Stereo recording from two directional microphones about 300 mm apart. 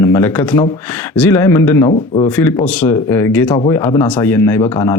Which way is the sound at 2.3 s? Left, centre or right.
Centre.